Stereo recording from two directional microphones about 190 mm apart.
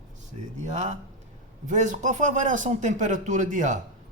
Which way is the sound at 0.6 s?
40° right (ahead or behind).